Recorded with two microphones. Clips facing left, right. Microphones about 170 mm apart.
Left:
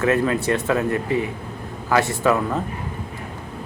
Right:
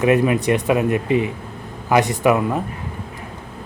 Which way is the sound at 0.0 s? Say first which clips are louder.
Right 3 dB; 15° right (ahead or behind).